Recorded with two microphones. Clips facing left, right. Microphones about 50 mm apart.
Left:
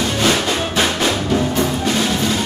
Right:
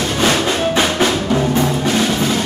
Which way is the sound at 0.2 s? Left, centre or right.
Centre.